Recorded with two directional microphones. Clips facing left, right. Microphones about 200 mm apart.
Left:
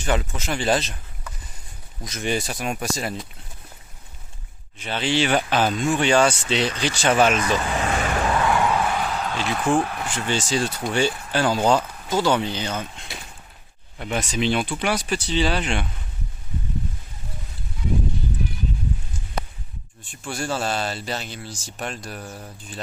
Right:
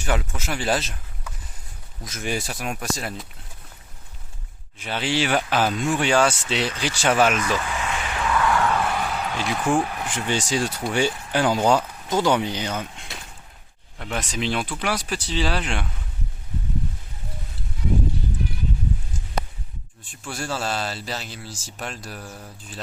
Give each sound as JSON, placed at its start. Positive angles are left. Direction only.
{"t": 0.0, "sound": "speech", "side_deg": -5}
{"t": 4.8, "sound": "speech", "side_deg": -10}
{"t": 7.3, "sound": "vehicle", "side_deg": 35}
{"t": 8.4, "sound": "a sound", "side_deg": 20}
{"t": 9.6, "sound": "speech", "side_deg": -10}
{"t": 14.0, "sound": "speech", "side_deg": 5}
{"t": 20.1, "sound": "speech", "side_deg": 0}